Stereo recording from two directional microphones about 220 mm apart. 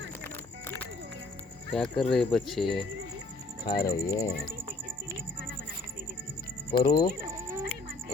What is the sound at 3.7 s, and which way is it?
Cricket, 15° left (ahead or behind).